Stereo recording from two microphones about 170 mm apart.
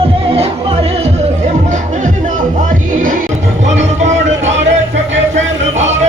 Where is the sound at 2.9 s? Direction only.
50° right (ahead or behind).